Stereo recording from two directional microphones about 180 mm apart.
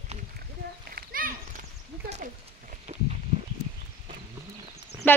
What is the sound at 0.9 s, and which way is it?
Children playing, 50° right (ahead or behind).